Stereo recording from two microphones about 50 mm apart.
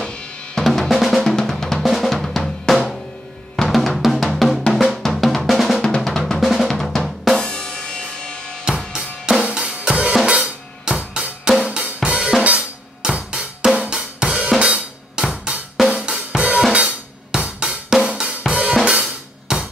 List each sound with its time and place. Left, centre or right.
0.6 s drum: centre
5.8 s drum: centre
6.0 s drum: centre
7.3 s drum kit: centre
9.2 s drum kit: centre
11.6 s drum: centre
12.4 s drum kit: centre
15.8 s cymbal: centre
16.3 s drum kit: right